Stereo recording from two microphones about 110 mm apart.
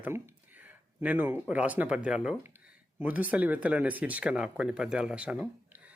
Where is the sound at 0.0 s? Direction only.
20° right (ahead or behind).